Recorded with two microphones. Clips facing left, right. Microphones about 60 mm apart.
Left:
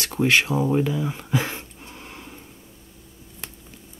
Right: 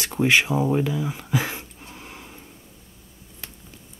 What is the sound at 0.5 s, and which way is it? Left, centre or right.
Speech, centre.